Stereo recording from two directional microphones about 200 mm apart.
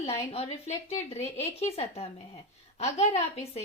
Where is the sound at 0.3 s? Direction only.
30° left (ahead or behind).